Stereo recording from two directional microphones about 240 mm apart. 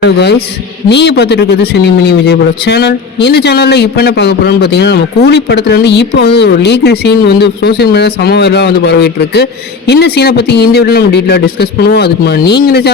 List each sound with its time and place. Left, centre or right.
0.0 s speech: left